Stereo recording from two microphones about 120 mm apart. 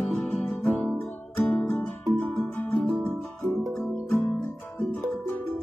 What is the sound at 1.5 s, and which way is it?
Music, 20° left (ahead or behind).